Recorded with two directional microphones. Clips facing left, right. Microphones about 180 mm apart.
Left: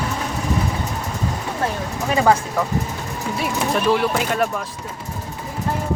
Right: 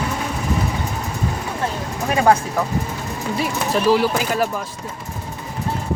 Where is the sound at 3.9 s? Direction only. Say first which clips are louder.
Right 3 dB; 5° right (ahead or behind).